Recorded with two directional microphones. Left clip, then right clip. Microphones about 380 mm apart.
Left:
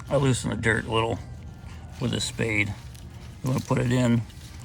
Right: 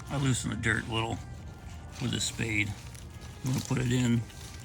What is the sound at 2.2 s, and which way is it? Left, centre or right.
Speech, left.